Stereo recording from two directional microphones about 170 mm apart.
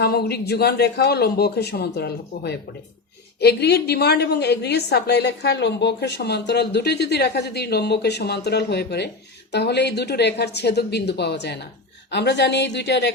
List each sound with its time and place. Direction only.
0.0 s a woman's voice: 65° left (ahead or behind); by 13.1 s 90° left